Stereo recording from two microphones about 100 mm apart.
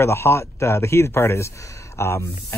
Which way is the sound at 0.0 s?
25° left (ahead or behind).